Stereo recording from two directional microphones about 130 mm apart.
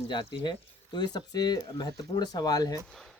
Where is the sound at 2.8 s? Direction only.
Centre (ahead or behind).